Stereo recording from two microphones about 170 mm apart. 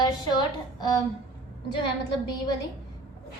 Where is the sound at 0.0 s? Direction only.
25° left (ahead or behind).